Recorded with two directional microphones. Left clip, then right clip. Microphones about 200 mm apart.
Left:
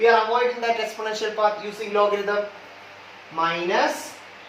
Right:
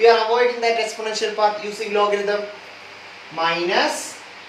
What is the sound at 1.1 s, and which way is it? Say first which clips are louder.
Speech: right 3 dB; 10° left (ahead or behind).